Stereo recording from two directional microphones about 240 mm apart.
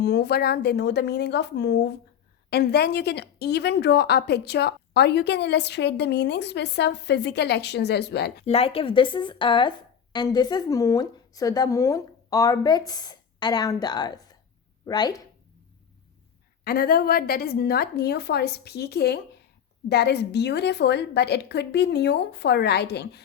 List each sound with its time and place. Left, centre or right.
0.0 s speech: left
8.4 s speech: left
16.6 s speech: left